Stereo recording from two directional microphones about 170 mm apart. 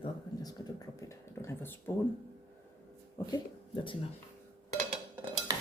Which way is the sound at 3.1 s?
30° left (ahead or behind).